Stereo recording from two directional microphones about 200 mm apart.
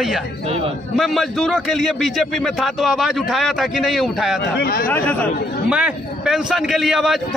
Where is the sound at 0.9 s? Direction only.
Centre (ahead or behind).